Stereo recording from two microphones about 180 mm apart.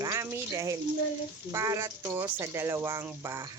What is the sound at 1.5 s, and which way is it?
Speech, 15° right (ahead or behind).